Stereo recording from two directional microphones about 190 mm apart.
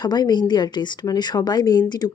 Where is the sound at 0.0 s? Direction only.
20° left (ahead or behind).